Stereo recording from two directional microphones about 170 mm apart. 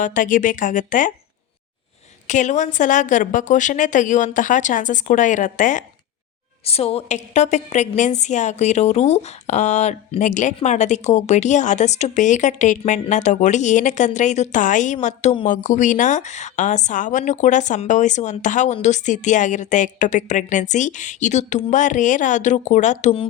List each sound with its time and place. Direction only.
0.0 s a woman's voice: 50° left (ahead or behind)
2.2 s a woman's voice: 45° left (ahead or behind)
6.7 s a woman's voice: 35° left (ahead or behind)